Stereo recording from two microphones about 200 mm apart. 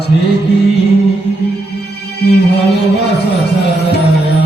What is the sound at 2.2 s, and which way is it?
Music, 55° left (ahead or behind).